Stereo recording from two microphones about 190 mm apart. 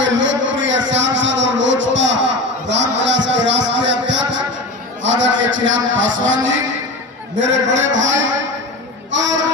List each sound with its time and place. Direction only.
0.0 s a sound: 75° right (ahead or behind)
5.0 s a man's voice: 75° right (ahead or behind)
9.1 s child singing: 75° right (ahead or behind)